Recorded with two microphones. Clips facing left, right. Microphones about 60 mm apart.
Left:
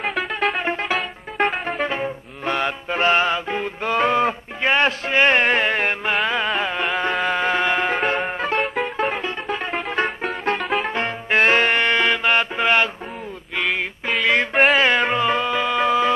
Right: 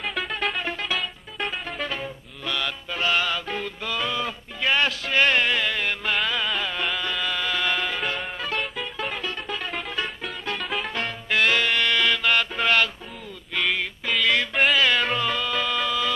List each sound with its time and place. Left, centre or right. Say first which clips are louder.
0.1 s music: left 4 dB; centre
0.6 s music: left 5 dB; left
3.8 s a sound: left 11 dB; left
6.2 s music: left 5 dB; left
8.5 s music: left 8 dB; left
9.1 s music: left 5 dB; left
10.6 s music: left 6 dB; centre
10.9 s music: left 5 dB; left
14.2 s music: left 5 dB; left